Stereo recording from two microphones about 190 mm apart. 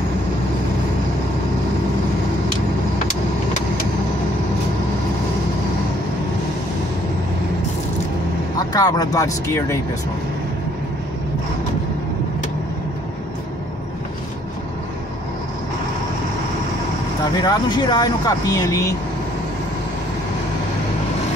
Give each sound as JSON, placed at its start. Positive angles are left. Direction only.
{"t": 8.5, "sound": "speech", "side_deg": 20}
{"t": 17.4, "sound": "speech", "side_deg": 20}